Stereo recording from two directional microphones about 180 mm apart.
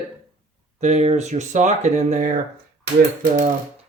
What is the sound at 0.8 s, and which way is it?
Speech, 40° right (ahead or behind).